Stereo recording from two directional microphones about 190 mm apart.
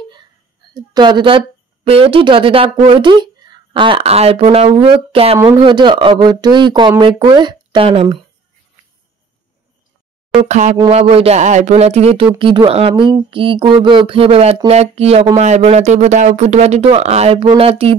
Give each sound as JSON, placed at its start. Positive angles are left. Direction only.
{"t": 0.7, "sound": "speech", "side_deg": -25}
{"t": 10.4, "sound": "speech", "side_deg": -35}